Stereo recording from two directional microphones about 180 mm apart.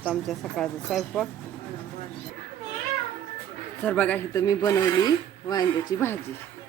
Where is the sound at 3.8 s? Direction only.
10° left (ahead or behind).